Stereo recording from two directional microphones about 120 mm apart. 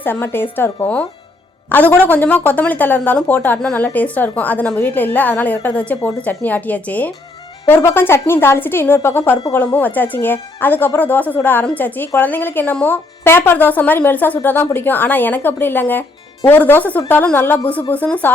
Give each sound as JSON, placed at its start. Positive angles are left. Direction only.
{"t": 0.0, "sound": "speech", "side_deg": 15}
{"t": 1.7, "sound": "a woman's voice", "side_deg": 15}